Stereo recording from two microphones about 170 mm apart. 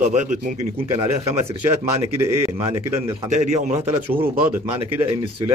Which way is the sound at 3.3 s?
45° right (ahead or behind).